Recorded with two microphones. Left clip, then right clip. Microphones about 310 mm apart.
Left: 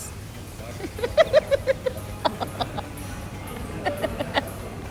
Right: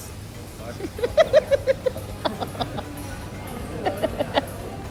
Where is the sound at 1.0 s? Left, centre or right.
Centre.